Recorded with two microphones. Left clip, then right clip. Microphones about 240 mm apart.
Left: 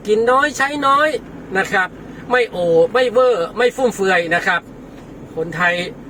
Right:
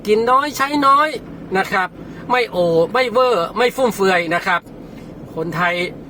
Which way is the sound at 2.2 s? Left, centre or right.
Centre.